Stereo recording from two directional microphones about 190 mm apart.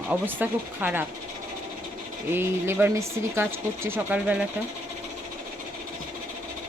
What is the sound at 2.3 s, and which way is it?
Speech, 10° right (ahead or behind).